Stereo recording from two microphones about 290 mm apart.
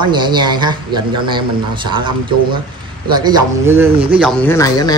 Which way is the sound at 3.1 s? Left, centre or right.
Centre.